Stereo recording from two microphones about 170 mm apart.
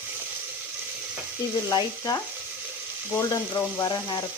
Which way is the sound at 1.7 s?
25° left (ahead or behind).